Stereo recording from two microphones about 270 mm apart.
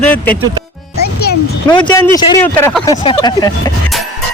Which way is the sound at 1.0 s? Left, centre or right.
Left.